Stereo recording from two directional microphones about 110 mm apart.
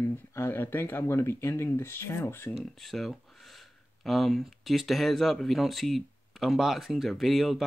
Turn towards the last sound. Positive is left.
turn(degrees=0)  # may be behind; listen again after turning